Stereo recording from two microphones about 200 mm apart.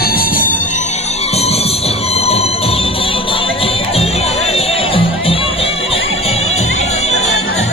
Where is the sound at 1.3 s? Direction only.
30° left (ahead or behind).